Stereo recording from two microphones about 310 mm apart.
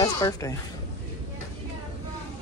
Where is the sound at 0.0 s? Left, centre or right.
Centre.